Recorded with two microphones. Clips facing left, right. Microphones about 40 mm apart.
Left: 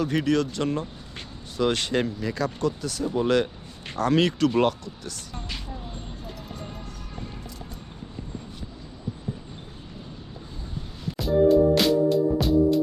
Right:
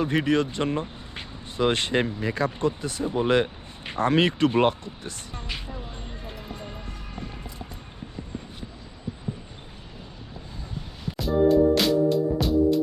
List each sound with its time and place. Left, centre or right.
0.0 s speech: right
11.2 s music: centre